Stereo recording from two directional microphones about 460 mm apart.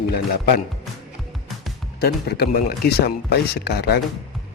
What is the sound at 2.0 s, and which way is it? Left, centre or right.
Speech, left.